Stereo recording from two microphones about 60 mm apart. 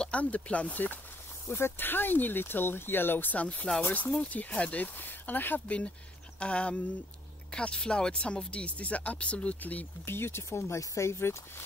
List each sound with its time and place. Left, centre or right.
0.0 s speech: left
1.5 s speech: left
6.4 s speech: centre
10.0 s speech: left